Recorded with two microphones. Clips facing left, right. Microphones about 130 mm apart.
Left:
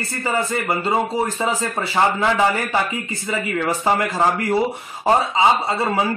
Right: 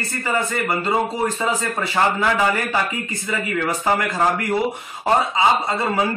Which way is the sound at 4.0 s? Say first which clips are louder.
Left 1 dB; 30° left (ahead or behind).